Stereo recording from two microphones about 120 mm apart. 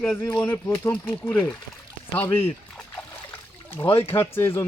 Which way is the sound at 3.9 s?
20° left (ahead or behind).